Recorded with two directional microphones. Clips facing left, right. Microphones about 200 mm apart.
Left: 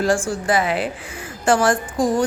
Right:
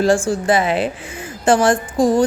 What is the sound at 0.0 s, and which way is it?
A woman's voice, 25° right (ahead or behind).